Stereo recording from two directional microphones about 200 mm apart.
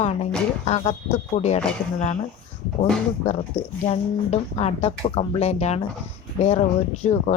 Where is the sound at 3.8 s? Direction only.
30° left (ahead or behind).